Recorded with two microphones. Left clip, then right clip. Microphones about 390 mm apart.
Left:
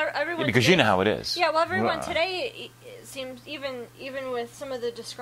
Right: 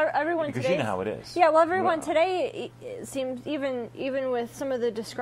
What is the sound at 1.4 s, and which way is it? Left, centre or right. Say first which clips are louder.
A woman's voice: right 4 dB; right.